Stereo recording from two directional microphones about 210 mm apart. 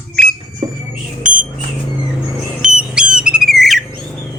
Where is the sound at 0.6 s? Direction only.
20° right (ahead or behind).